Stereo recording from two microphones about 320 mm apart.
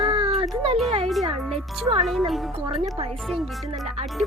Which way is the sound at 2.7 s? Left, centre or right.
Centre.